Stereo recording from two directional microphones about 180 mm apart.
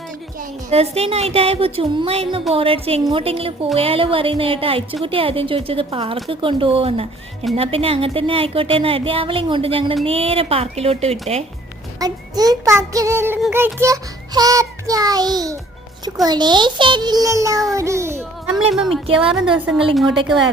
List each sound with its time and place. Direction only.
0.7 s speech: 35° right (ahead or behind)
11.9 s music: 20° right (ahead or behind)
17.7 s a child's voice: 15° right (ahead or behind)
18.7 s a woman's voice: centre (ahead or behind)
19.0 s music: 30° right (ahead or behind)
19.3 s a woman's voice: 5° right (ahead or behind)